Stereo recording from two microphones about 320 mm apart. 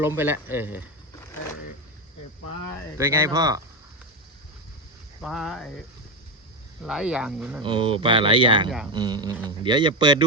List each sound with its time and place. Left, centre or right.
0.0 s speech: centre
3.0 s speech: centre
5.2 s speech: centre
6.8 s speech: centre
7.6 s speech: centre